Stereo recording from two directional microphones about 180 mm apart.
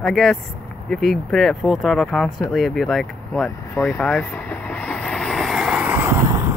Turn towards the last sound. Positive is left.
turn(degrees=-15)  # may be behind; listen again after turning